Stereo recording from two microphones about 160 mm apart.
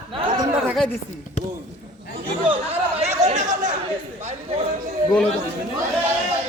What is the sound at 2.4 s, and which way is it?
Chatter, 35° right (ahead or behind).